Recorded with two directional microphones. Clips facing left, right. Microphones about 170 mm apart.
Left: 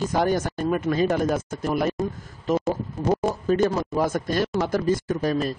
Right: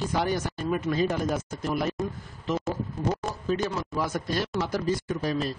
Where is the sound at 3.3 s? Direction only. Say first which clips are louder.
Left 7 dB; 50° left (ahead or behind).